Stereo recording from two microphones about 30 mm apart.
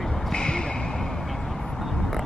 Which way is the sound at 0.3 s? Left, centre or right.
Left.